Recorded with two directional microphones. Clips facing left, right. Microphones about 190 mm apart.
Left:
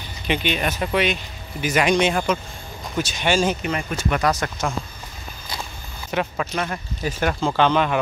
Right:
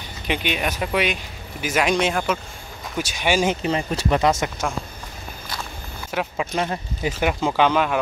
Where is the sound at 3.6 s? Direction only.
30° right (ahead or behind).